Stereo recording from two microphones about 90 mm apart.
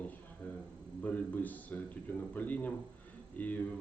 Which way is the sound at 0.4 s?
15° left (ahead or behind).